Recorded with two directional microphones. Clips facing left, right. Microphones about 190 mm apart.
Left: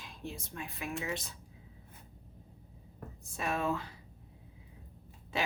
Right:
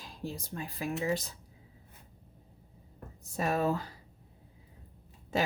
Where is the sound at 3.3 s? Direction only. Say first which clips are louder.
Right 4 dB; 40° right (ahead or behind).